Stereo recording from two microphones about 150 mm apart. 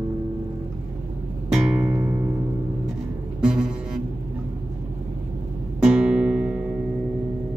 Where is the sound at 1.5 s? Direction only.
10° right (ahead or behind).